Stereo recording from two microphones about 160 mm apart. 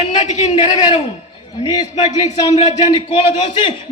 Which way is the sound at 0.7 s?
25° left (ahead or behind).